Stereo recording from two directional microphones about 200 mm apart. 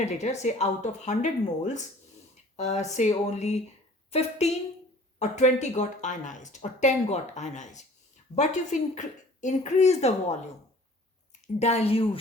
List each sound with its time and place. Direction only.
0.0 s a woman's voice: 35° left (ahead or behind)